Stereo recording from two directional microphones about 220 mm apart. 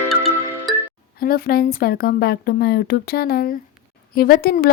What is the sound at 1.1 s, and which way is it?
A woman's voice, 40° left (ahead or behind).